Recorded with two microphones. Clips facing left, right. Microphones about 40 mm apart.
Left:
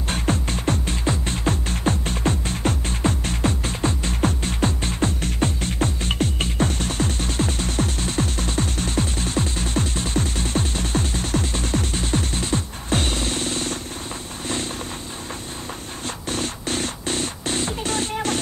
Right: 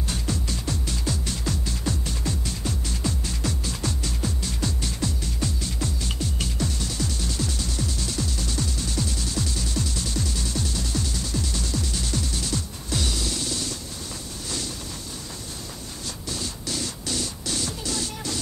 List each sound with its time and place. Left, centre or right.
0.1 s music: left
16.3 s music: left